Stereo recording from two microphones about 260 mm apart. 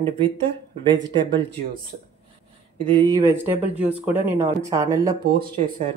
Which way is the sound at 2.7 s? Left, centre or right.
Centre.